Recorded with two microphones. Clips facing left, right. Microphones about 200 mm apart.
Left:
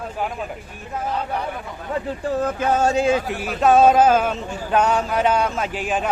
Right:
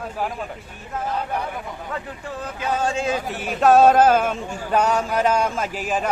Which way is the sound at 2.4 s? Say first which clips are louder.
Left 4 dB; 50° left (ahead or behind).